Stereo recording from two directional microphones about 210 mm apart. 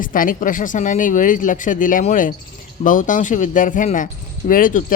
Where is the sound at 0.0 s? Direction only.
40° left (ahead or behind).